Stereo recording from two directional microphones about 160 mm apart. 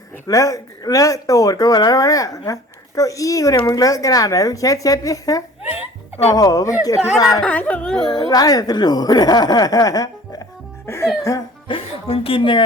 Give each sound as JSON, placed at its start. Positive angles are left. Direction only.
{"t": 0.3, "sound": "speech", "side_deg": 20}
{"t": 7.4, "sound": "speech", "side_deg": 10}
{"t": 8.1, "sound": "speech", "side_deg": 25}
{"t": 11.7, "sound": "a woman's voice", "side_deg": 35}